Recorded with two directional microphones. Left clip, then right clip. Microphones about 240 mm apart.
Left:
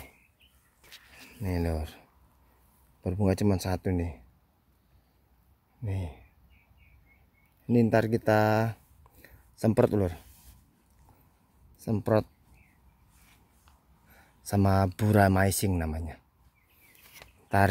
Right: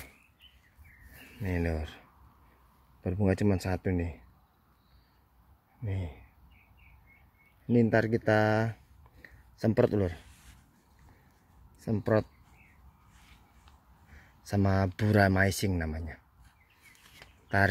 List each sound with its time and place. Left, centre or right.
1.4 s speech: centre
5.8 s speech: centre
7.6 s speech: centre
11.8 s speech: centre
14.4 s speech: centre
17.2 s a sound: centre